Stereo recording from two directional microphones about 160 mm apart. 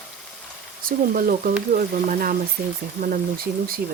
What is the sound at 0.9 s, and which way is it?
Speech, 60° right (ahead or behind).